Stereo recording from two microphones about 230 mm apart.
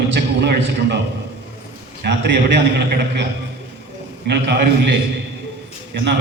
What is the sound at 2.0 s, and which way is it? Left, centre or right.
A man's voice, right.